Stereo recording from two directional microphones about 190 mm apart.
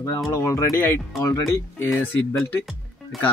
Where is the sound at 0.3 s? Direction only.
15° left (ahead or behind).